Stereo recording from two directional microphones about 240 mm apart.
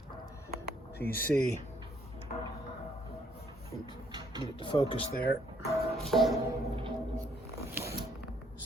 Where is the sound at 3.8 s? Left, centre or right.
Centre.